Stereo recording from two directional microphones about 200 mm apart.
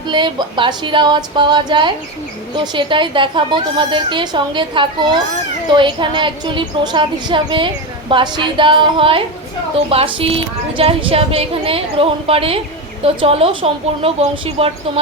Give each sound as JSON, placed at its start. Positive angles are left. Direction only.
{"t": 0.1, "sound": "a woman's voice", "side_deg": -25}